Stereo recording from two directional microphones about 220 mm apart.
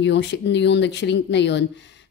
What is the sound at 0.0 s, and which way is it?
Speech, 50° left (ahead or behind).